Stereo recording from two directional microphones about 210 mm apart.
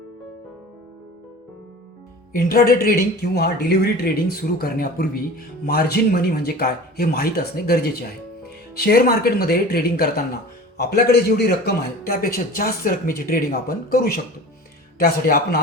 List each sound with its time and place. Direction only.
2.3 s a man's voice: 45° left (ahead or behind)